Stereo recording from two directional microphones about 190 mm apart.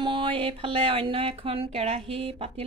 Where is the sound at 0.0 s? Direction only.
25° right (ahead or behind).